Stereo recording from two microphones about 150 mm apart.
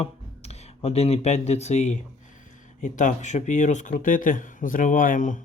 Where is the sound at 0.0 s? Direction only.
45° left (ahead or behind).